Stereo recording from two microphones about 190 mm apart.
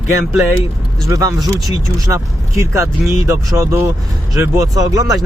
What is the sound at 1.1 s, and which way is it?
Speech, 15° right (ahead or behind).